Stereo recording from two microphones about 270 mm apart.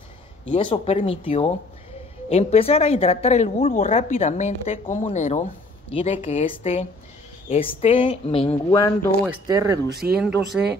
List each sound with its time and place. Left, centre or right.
0.5 s a woman's voice: centre
8.6 s speech: centre
9.5 s speech: centre